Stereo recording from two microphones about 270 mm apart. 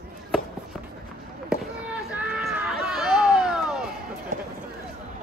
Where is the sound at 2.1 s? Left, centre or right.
Centre.